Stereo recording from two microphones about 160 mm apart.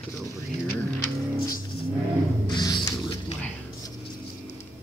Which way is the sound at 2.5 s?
30° left (ahead or behind).